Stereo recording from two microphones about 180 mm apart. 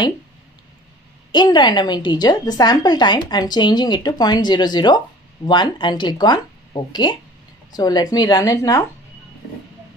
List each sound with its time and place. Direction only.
1.3 s a woman's voice: 25° left (ahead or behind)